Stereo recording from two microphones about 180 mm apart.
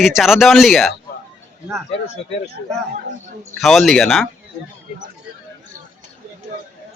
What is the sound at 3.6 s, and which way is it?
Speech, centre (ahead or behind).